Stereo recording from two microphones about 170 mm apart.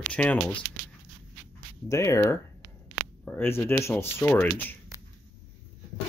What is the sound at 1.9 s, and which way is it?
Speech, 20° left (ahead or behind).